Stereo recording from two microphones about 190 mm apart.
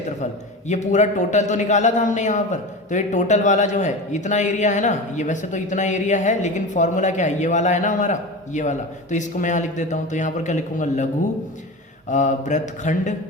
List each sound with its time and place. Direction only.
0.7 s a man's voice: 40° left (ahead or behind)